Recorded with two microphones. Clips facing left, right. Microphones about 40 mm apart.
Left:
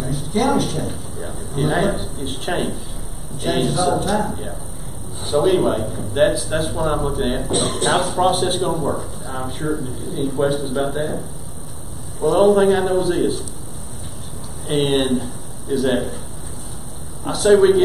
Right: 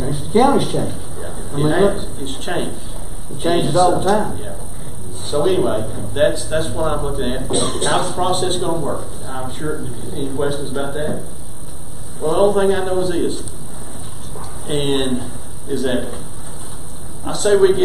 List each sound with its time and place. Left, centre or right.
0.2 s a sound: centre
0.7 s a man's voice: centre
14.7 s a man's voice: centre
17.2 s a man's voice: centre